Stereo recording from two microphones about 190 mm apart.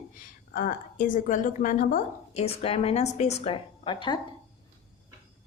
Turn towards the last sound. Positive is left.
turn(degrees=25)  # may be behind; listen again after turning